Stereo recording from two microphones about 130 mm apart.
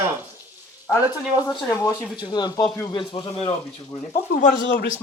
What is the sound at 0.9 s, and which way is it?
Speech, 30° left (ahead or behind).